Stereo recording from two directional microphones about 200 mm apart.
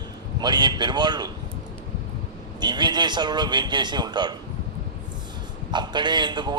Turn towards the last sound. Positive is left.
turn(degrees=-20)  # may be behind; listen again after turning